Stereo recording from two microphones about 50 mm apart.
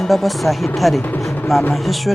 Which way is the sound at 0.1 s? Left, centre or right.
Centre.